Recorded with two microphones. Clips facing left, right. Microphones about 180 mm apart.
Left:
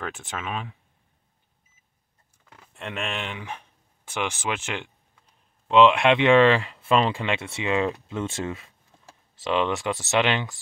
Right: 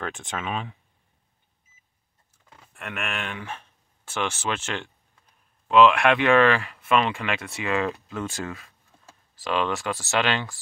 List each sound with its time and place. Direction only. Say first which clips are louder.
0.0 s speech: right 1 dB; 5° left (ahead or behind)
2.7 s speech: left 1 dB; 25° left (ahead or behind)